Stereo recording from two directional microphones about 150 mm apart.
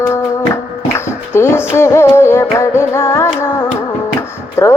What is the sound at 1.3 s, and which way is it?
Music, 15° left (ahead or behind).